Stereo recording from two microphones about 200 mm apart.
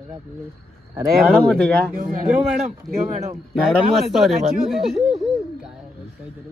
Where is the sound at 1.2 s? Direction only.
Centre (ahead or behind).